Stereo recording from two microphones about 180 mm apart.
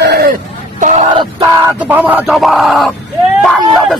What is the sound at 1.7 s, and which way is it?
Speech, 10° right (ahead or behind).